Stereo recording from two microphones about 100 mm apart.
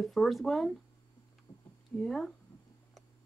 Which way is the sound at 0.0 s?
Centre (ahead or behind).